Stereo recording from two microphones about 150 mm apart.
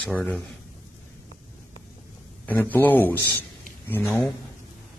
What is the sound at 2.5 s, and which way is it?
Speech, 10° left (ahead or behind).